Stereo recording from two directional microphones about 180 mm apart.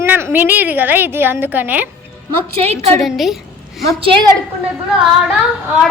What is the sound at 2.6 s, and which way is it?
Speech, 35° right (ahead or behind).